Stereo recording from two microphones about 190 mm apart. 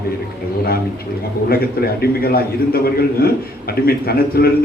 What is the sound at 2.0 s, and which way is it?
Speech, 55° left (ahead or behind).